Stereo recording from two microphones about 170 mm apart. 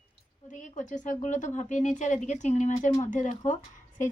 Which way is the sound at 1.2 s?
45° left (ahead or behind).